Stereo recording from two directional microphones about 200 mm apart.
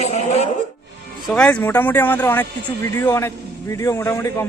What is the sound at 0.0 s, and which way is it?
Chuckle, 35° left (ahead or behind).